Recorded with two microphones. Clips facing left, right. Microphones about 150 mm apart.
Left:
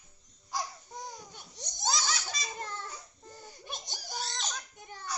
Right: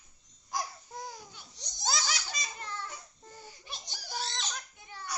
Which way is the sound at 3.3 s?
45° left (ahead or behind).